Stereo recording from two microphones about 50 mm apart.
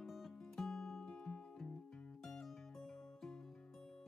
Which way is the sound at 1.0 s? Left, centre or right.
Centre.